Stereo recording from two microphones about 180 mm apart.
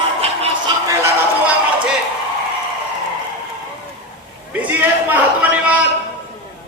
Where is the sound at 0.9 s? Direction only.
15° right (ahead or behind).